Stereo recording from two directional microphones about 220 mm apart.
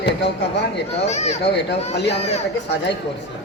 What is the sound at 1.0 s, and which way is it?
Speech, 30° left (ahead or behind).